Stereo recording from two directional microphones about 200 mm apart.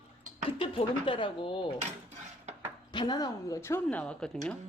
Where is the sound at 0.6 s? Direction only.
25° left (ahead or behind).